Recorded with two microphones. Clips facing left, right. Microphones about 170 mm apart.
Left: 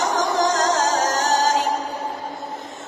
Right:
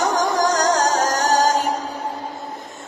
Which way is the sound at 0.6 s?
45° right (ahead or behind).